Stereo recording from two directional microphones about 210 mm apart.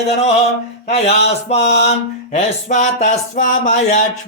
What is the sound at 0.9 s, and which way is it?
Speech, 30° left (ahead or behind).